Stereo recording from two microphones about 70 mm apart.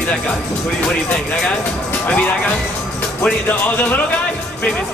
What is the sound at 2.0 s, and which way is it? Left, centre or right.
Speech, centre.